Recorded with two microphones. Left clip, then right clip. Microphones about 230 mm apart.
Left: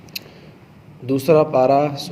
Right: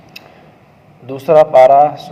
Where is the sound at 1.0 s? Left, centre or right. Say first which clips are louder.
Right 6 dB; left.